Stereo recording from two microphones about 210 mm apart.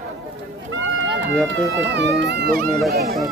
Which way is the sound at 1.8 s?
55° right (ahead or behind).